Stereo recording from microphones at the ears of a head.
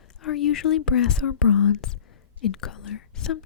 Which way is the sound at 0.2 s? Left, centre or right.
Left.